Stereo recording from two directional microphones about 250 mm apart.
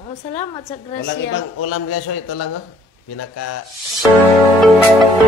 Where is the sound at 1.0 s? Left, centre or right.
Left.